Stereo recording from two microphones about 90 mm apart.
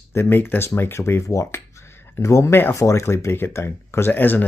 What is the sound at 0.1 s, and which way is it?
Speech, 25° left (ahead or behind).